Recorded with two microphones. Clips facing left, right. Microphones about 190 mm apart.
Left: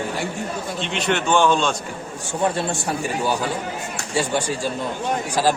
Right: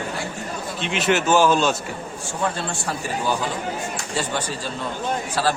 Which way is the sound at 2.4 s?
20° left (ahead or behind).